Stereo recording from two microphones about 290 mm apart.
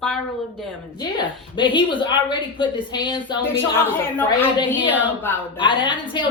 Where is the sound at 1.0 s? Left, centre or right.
Centre.